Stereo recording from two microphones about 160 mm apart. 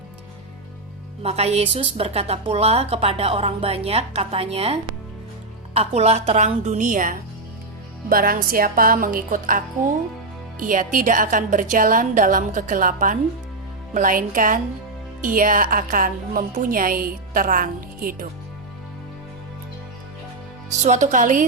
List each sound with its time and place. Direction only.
1.2 s a woman's voice: 40° right (ahead or behind); by 18.3 s 60° right (ahead or behind)
20.7 s a woman's voice: 45° right (ahead or behind)